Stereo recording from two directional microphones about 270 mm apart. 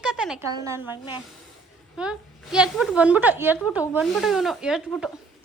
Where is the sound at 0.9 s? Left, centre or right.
Centre.